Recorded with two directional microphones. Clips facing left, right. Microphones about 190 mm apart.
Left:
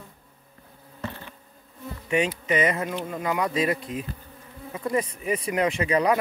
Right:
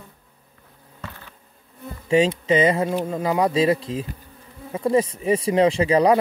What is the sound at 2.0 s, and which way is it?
Speech, 30° right (ahead or behind).